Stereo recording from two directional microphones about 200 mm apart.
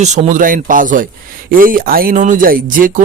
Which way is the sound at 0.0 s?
35° right (ahead or behind).